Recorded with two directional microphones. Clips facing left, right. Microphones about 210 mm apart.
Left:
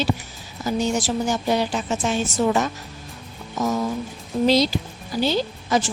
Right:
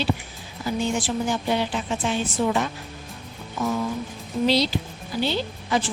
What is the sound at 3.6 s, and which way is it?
Music, 40° left (ahead or behind).